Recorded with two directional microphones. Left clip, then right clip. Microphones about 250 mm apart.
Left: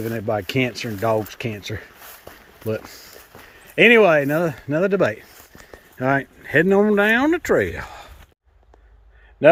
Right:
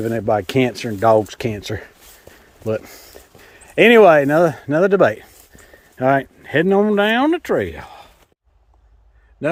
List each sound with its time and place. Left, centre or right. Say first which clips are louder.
0.0 s speech: right 5 dB; right; by 8.1 s centre